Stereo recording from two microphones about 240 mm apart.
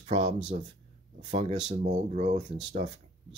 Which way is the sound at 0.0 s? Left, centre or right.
Right.